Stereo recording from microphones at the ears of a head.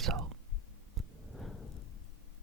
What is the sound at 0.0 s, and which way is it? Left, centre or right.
Whispering, right.